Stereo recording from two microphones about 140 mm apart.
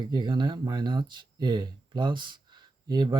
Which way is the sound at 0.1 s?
35° right (ahead or behind).